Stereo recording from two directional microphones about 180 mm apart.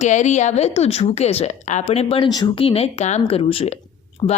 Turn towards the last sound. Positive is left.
turn(degrees=30)  # may be behind; listen again after turning